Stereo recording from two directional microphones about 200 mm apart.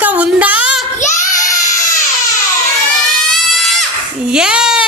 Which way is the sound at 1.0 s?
40° left (ahead or behind).